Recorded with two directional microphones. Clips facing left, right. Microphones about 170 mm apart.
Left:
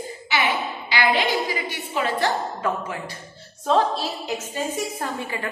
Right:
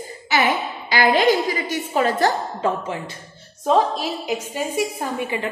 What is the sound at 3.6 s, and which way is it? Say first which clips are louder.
A woman's voice: right 2 dB; 15° right (ahead or behind).